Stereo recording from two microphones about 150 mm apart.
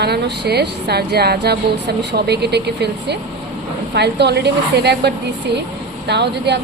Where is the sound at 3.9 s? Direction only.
90° right.